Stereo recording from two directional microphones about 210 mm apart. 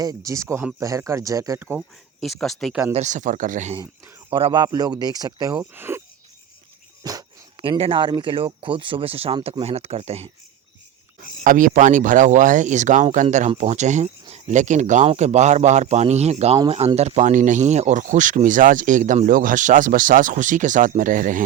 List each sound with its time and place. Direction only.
0.0 s speech: 15° right (ahead or behind); by 2.8 s centre (ahead or behind)
2.9 s speech: 35° right (ahead or behind)
3.8 s speech: 20° right (ahead or behind)
7.0 s speech: 20° right (ahead or behind); by 21.4 s 40° right (ahead or behind)